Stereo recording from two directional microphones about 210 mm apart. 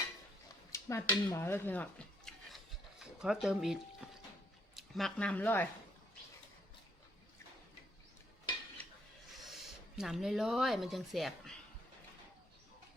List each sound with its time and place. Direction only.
0.7 s speech: 15° left (ahead or behind)
1.4 s a sound: 10° left (ahead or behind)
3.4 s speech: centre (ahead or behind)
9.4 s speech: centre (ahead or behind)